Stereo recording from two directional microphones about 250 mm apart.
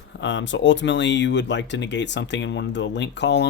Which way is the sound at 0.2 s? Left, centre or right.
Left.